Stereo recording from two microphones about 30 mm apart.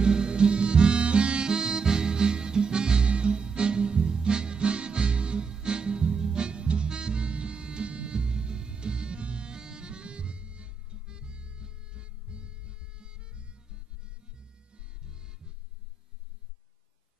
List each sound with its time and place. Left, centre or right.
0.0 s harmonica: right
3.1 s music: right